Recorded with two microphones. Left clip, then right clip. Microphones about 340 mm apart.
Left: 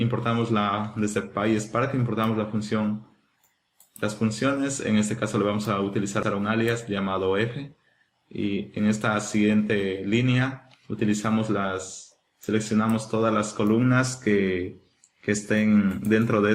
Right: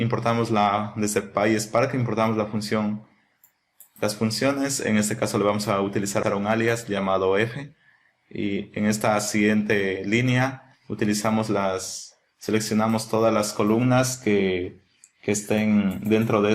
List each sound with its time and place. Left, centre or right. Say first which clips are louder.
0.0 s speech: right 3 dB; centre
4.0 s speech: right 3 dB; centre